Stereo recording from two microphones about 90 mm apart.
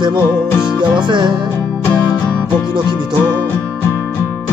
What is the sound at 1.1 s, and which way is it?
Music, 55° right (ahead or behind).